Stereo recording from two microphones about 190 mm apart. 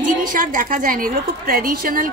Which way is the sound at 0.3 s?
45° right (ahead or behind).